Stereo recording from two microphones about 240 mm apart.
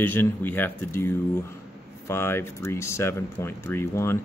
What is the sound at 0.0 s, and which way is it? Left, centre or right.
Speech, centre.